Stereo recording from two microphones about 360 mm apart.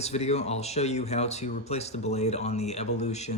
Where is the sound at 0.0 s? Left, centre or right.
Centre.